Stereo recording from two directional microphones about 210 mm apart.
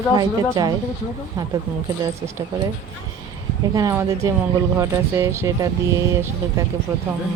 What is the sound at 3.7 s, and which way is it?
A woman's voice, 15° right (ahead or behind).